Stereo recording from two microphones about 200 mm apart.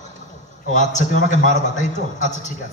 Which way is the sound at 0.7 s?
40° left (ahead or behind).